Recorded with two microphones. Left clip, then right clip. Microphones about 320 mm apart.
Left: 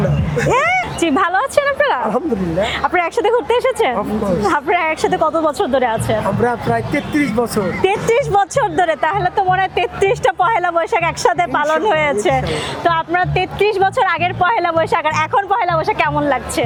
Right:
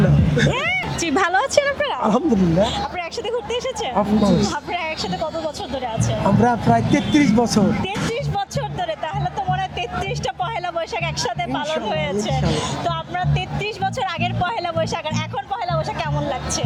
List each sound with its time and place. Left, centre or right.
1.0 s speech: centre
2.9 s speech: left
6.4 s speech: right
7.9 s speech: left